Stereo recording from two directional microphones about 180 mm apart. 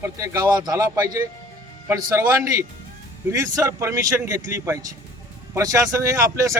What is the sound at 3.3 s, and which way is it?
Speech, 15° right (ahead or behind).